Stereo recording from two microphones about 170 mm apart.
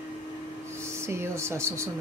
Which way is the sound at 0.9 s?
15° right (ahead or behind).